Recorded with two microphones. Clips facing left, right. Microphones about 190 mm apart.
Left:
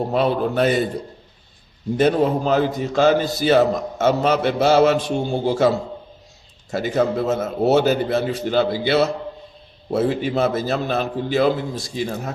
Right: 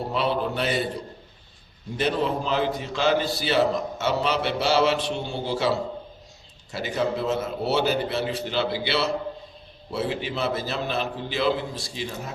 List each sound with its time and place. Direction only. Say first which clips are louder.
0.1 s a man's voice: left 4 dB; 45° left (ahead or behind)
2.0 s a man's voice: left 7 dB; 45° left (ahead or behind)